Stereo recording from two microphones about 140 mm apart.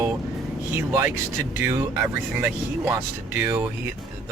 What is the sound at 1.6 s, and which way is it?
Speech, 20° right (ahead or behind).